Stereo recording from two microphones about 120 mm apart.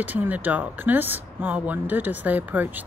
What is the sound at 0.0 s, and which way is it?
Speech, 15° right (ahead or behind).